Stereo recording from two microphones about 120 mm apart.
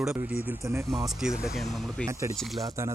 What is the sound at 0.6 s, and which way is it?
Speech, 25° right (ahead or behind).